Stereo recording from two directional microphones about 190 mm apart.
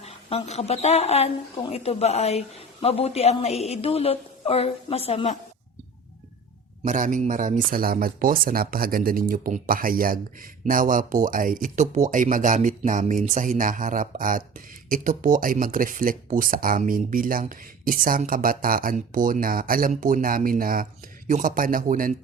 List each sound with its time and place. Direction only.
0.0 s a woman's voice: 30° left (ahead or behind)
6.8 s speech: 40° right (ahead or behind)